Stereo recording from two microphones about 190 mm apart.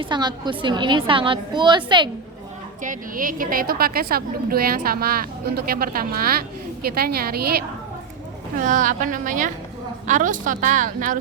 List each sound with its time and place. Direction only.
0.0 s a woman's voice: 25° right (ahead or behind)
2.8 s a woman's voice: 45° right (ahead or behind)
8.5 s a woman's voice: 40° right (ahead or behind)